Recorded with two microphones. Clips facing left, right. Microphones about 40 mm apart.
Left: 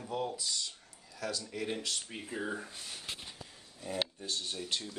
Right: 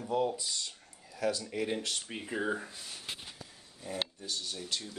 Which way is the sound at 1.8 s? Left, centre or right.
Right.